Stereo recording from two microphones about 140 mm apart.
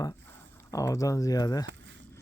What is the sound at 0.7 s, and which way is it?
Speech, 25° left (ahead or behind).